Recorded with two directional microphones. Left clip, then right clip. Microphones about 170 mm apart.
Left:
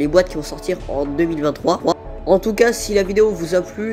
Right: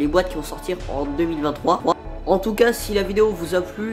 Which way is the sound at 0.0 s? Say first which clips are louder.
Left 4 dB; 25° left (ahead or behind).